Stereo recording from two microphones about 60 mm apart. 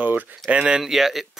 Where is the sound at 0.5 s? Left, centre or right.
Centre.